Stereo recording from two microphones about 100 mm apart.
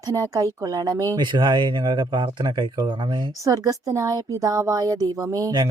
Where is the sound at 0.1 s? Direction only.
30° right (ahead or behind); by 2.9 s 50° right (ahead or behind).